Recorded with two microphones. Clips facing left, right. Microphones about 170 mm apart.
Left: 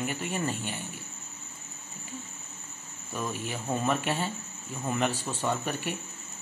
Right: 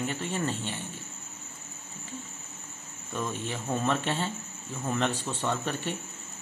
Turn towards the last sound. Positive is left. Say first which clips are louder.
# even
turn(degrees=10)  # may be behind; listen again after turning